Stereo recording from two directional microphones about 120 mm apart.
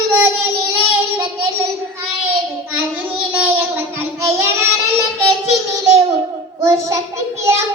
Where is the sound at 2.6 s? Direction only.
15° right (ahead or behind).